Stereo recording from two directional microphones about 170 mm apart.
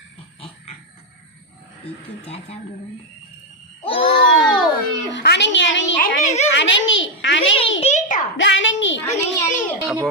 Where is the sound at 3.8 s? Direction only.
30° left (ahead or behind).